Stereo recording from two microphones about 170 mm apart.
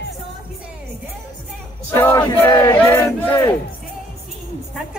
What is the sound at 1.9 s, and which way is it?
Crowd, 15° left (ahead or behind).